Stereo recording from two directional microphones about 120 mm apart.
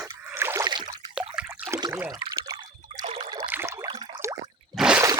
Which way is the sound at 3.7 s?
35° right (ahead or behind).